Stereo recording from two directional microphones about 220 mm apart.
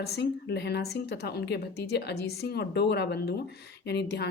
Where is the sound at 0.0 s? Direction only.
50° left (ahead or behind).